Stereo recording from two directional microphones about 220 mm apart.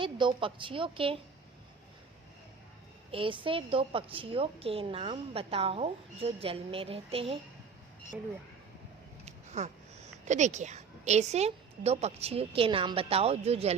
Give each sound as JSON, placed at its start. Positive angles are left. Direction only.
{"t": 0.0, "sound": "a woman's voice", "side_deg": -20}
{"t": 3.1, "sound": "a woman's voice", "side_deg": -25}
{"t": 9.2, "sound": "speech", "side_deg": -30}